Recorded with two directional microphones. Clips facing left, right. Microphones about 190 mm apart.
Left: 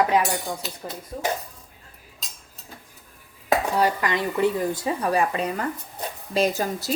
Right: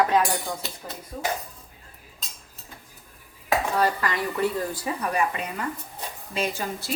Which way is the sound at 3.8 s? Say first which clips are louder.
Left 2 dB; 15° left (ahead or behind).